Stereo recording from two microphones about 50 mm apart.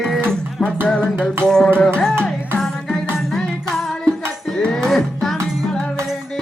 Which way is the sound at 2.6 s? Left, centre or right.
Centre.